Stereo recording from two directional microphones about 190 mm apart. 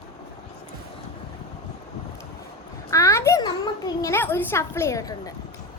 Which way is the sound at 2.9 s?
15° left (ahead or behind).